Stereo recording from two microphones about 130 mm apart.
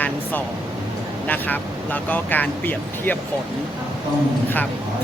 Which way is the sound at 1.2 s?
15° left (ahead or behind).